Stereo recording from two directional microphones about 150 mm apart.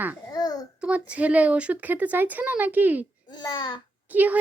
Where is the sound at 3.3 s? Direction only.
30° left (ahead or behind).